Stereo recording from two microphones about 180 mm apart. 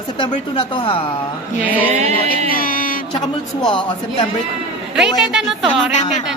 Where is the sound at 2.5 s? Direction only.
50° left (ahead or behind).